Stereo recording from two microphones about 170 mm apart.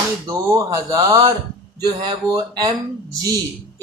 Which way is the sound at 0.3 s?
20° right (ahead or behind).